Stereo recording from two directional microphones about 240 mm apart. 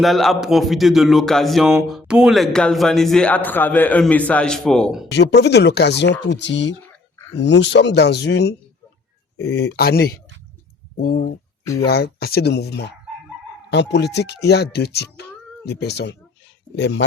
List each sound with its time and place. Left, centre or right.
0.0 s speech: centre
5.1 s speech: left
11.6 s speech: centre
11.9 s speech: left